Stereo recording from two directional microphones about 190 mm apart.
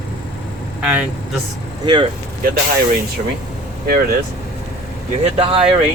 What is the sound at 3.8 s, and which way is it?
Speech, 50° right (ahead or behind).